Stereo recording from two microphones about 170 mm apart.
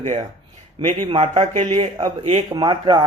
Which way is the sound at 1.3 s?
40° right (ahead or behind).